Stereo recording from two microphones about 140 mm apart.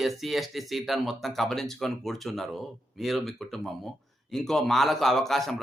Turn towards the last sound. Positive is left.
turn(degrees=0)  # may be behind; listen again after turning